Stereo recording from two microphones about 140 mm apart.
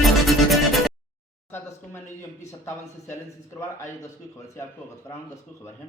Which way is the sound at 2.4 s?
20° left (ahead or behind).